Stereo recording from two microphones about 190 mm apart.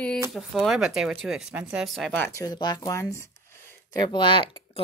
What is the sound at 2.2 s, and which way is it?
A woman's voice, 15° left (ahead or behind).